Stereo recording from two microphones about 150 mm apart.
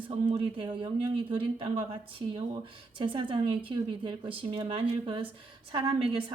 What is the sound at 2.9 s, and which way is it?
A woman's voice, 35° right (ahead or behind).